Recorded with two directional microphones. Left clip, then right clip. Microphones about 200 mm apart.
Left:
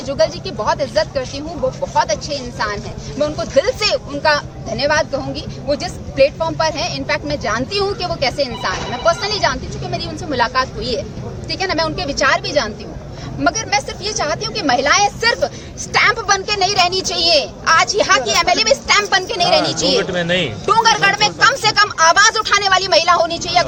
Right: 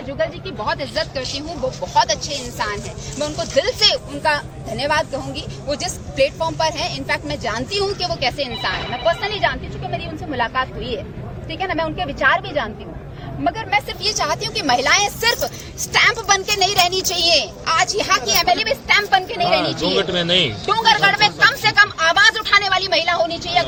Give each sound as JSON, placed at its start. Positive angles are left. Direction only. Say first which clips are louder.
{"t": 0.1, "sound": "a woman's voice", "louder": "left 6 dB", "side_deg": 10}
{"t": 20.1, "sound": "speech", "louder": "even", "side_deg": -55}
{"t": 21.6, "sound": "a woman's voice", "louder": "left 2 dB", "side_deg": 15}